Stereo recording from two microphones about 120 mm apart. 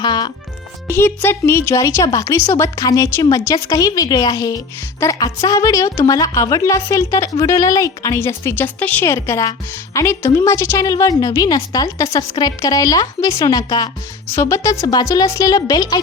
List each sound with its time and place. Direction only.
0.0 s music: 40° left (ahead or behind)
0.9 s speech: 20° left (ahead or behind)
9.1 s speech: 25° left (ahead or behind)